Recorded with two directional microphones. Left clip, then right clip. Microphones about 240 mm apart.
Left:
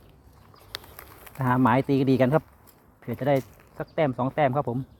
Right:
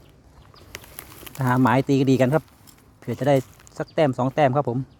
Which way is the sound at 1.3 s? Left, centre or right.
Centre.